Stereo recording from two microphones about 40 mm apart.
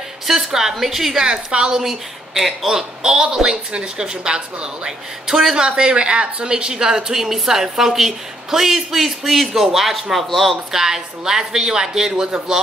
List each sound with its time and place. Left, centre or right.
0.3 s speech: centre
1.2 s a woman's voice: centre
1.8 s speech: centre